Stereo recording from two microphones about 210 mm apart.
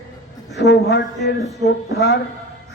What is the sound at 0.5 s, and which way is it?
A man's voice, 55° left (ahead or behind).